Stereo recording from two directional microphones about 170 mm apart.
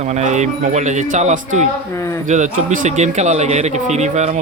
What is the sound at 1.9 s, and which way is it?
Speech, 15° left (ahead or behind).